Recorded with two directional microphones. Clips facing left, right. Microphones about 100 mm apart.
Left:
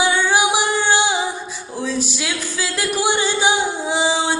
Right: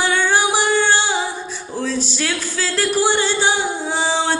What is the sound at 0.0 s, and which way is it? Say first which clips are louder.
Music: even; 15° left (ahead or behind).